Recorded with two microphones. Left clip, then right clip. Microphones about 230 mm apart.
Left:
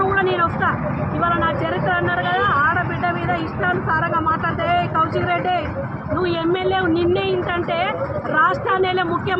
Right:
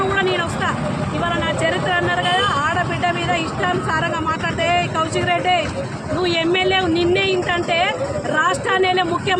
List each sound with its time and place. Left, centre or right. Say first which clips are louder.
0.2 s vehicle: left 1 dB; right
1.2 s speech: left 1 dB; right
4.1 s a sound: left 2 dB; right
6.2 s speech: right 3 dB; right